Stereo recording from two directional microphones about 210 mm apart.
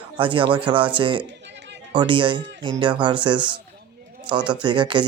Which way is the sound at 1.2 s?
55° right (ahead or behind).